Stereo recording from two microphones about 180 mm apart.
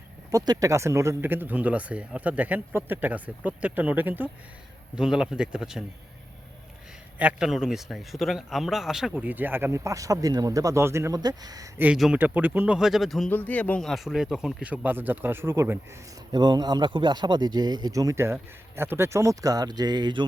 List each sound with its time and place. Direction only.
0.3 s a man's voice: 20° right (ahead or behind); by 5.8 s 5° right (ahead or behind)
7.2 s a man's voice: 5° right (ahead or behind)
11.8 s speech: 5° right (ahead or behind); by 20.2 s 25° right (ahead or behind)